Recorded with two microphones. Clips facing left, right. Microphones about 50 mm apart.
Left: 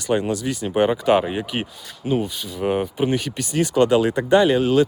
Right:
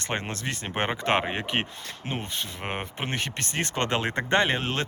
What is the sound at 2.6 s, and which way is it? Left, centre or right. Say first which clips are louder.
Speech: left 16 dB; right.